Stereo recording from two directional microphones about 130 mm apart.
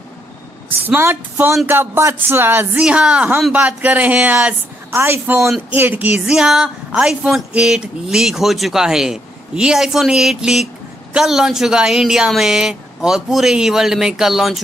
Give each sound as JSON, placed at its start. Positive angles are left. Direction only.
{"t": 0.7, "sound": "a woman's voice", "side_deg": -15}